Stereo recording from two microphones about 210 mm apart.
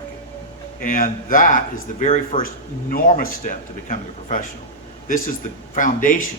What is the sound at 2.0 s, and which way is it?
Speech, 25° left (ahead or behind).